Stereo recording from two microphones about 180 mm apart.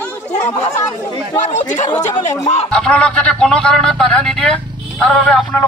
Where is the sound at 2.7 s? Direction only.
5° left (ahead or behind).